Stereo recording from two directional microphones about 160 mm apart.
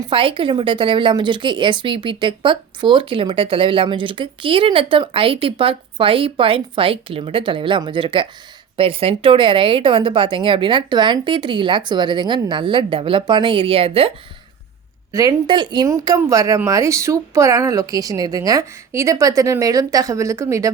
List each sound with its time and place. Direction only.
0.1 s speech: 35° right (ahead or behind)
15.1 s speech: 20° right (ahead or behind)